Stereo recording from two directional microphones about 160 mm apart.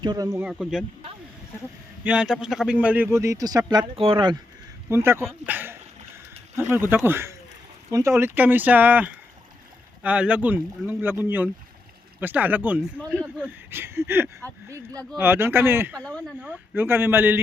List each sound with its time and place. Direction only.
0.0 s a man's voice: 25° right (ahead or behind)
0.4 s speech: centre (ahead or behind)
2.0 s a man's voice: 5° right (ahead or behind); by 4.4 s 30° right (ahead or behind)
4.9 s a man's voice: 15° right (ahead or behind)
16.0 s speech: 5° left (ahead or behind)
16.4 s a man's voice: 10° right (ahead or behind)